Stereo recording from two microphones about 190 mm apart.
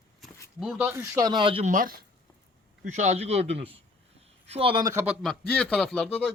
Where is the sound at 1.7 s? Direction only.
45° right (ahead or behind); by 4.9 s 25° right (ahead or behind).